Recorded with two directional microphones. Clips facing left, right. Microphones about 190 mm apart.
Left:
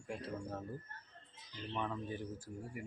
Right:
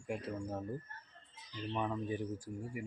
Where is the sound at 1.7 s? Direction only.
15° right (ahead or behind).